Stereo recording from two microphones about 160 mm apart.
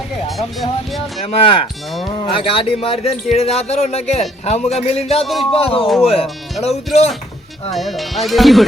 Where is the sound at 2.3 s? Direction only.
35° left (ahead or behind).